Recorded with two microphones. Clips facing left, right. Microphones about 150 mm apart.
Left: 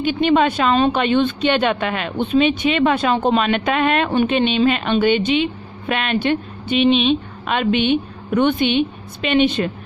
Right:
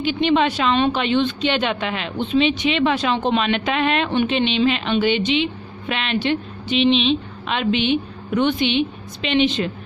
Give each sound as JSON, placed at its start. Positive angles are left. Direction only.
{"t": 0.0, "sound": "a woman's voice", "side_deg": 45}